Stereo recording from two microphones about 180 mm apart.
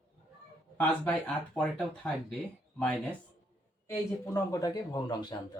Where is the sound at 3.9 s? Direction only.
15° left (ahead or behind).